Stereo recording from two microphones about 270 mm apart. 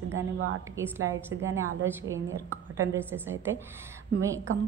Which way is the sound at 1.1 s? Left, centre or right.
Right.